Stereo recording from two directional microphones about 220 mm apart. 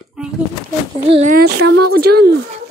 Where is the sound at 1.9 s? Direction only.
45° right (ahead or behind).